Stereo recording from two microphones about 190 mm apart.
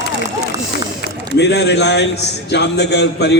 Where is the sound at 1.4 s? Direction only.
65° left (ahead or behind).